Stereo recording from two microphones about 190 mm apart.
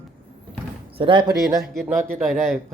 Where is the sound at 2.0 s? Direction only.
5° left (ahead or behind).